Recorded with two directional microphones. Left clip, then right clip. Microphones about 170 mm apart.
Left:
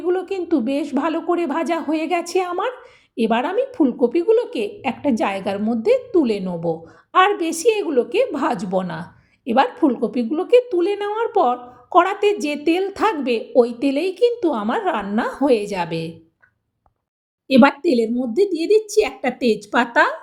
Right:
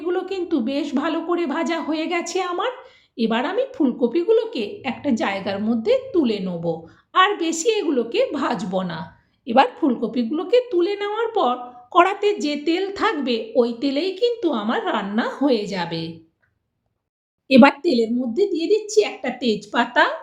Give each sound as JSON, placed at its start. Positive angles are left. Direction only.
{"t": 0.0, "sound": "a woman's voice", "side_deg": 35}
{"t": 11.9, "sound": "a woman's voice", "side_deg": 0}
{"t": 12.2, "sound": "a woman's voice", "side_deg": 40}
{"t": 17.5, "sound": "a woman's voice", "side_deg": 0}
{"t": 17.8, "sound": "a woman's voice", "side_deg": 50}